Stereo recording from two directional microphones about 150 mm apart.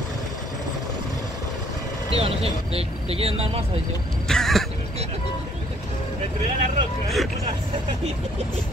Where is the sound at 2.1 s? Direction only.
40° right (ahead or behind).